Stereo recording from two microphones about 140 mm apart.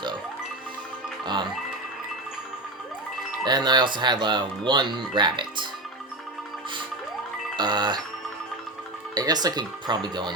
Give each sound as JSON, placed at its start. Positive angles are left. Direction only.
{"t": 1.2, "sound": "music", "side_deg": -30}
{"t": 3.4, "sound": "speech", "side_deg": -30}
{"t": 7.5, "sound": "bicycle bell", "side_deg": -30}
{"t": 9.1, "sound": "speech", "side_deg": -30}